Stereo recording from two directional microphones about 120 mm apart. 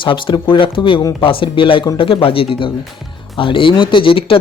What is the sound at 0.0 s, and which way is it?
Speech, 45° left (ahead or behind).